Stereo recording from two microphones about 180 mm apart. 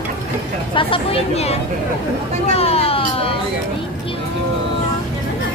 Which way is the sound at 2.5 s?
35° left (ahead or behind).